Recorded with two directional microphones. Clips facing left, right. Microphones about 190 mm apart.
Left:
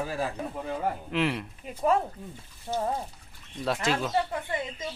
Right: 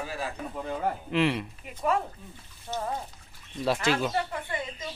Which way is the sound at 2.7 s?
25° left (ahead or behind).